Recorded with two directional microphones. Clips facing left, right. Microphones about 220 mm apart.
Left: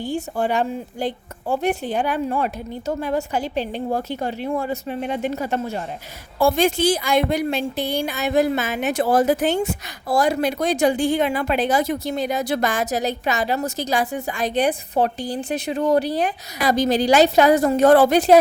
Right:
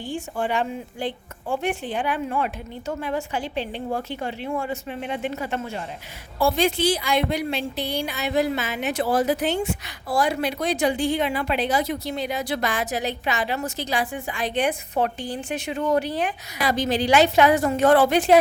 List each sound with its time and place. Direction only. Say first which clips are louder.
0.0 s a woman's voice: left 4 dB; 40° left (ahead or behind)